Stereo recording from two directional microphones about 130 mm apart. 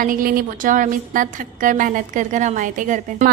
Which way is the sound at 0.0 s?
90° right.